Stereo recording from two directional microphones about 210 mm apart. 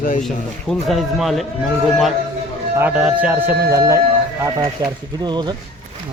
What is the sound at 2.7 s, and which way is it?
Speech, 5° right (ahead or behind).